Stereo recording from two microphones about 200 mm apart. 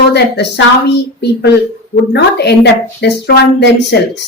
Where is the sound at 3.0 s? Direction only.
55° left (ahead or behind).